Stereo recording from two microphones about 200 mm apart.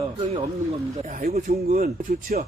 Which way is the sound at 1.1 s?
45° right (ahead or behind).